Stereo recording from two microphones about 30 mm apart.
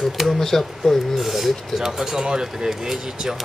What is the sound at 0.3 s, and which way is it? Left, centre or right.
Speech, centre.